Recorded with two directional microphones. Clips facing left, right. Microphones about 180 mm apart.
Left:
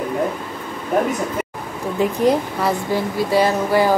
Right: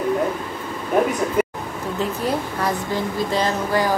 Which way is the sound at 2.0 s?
10° left (ahead or behind).